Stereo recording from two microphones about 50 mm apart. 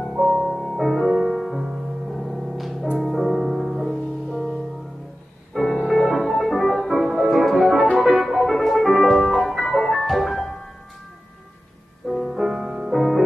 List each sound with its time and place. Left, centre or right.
0.2 s music: centre
12.1 s music: centre
12.9 s music: centre